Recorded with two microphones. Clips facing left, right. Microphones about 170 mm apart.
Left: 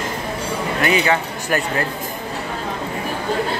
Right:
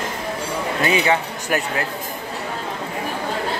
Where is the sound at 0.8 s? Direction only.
20° right (ahead or behind).